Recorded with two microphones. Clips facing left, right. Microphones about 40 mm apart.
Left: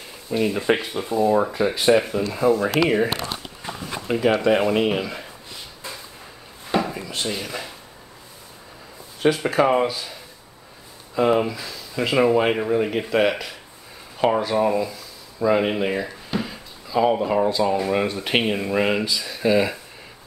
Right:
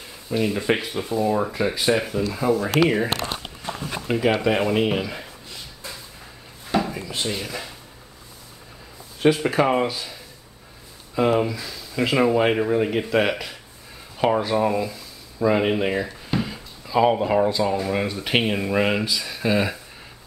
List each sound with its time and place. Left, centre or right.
0.3 s speech: centre
2.8 s speech: right
3.8 s speech: centre
6.8 s wood: centre
7.2 s speech: centre
9.2 s speech: centre
11.1 s speech: centre